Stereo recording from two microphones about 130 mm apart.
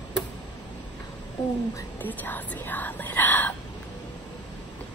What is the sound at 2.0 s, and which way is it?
Speech, 15° left (ahead or behind).